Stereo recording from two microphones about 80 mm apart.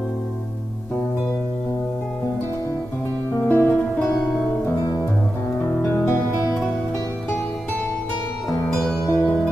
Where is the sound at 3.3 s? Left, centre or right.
Left.